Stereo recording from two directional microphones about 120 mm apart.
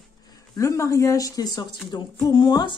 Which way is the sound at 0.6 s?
25° left (ahead or behind).